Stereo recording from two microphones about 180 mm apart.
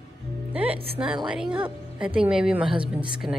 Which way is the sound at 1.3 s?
5° right (ahead or behind).